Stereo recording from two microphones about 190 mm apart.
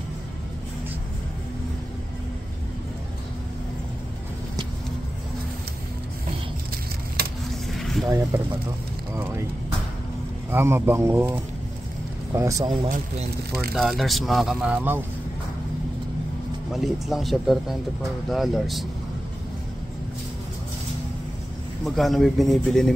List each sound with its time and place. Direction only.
7.2 s vehicle: 55° right (ahead or behind)
7.8 s a sound: centre (ahead or behind)
9.1 s speech: 15° right (ahead or behind)
10.5 s speech: 10° right (ahead or behind)
13.7 s speech: centre (ahead or behind)
16.7 s speech: centre (ahead or behind)
21.8 s speech: centre (ahead or behind)